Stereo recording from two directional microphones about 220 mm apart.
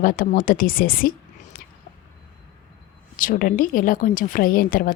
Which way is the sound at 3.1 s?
40° left (ahead or behind).